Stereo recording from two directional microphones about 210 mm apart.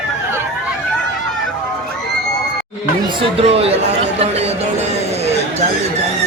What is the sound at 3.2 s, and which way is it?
Speech, 30° right (ahead or behind).